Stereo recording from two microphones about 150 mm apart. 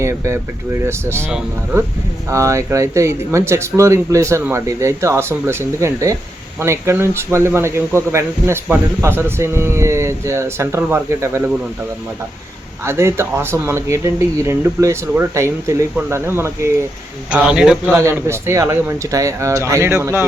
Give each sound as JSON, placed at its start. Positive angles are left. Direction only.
{"t": 0.0, "sound": "speech", "side_deg": -20}
{"t": 2.3, "sound": "speech", "side_deg": -20}
{"t": 12.8, "sound": "speech", "side_deg": -15}
{"t": 17.3, "sound": "a man's voice", "side_deg": -5}
{"t": 17.9, "sound": "speech", "side_deg": -15}